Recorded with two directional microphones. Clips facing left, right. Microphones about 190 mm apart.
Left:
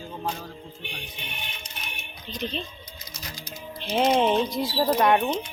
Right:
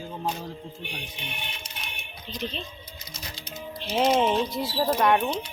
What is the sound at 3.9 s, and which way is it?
Speech, centre (ahead or behind).